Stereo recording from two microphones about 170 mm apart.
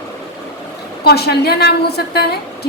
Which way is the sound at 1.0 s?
70° left (ahead or behind).